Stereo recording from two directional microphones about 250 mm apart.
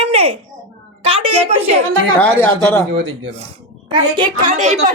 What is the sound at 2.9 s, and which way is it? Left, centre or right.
Speech, right.